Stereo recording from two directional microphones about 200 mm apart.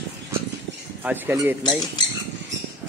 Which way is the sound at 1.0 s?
10° right (ahead or behind).